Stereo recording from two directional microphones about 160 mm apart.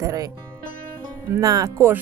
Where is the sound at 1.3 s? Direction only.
20° right (ahead or behind).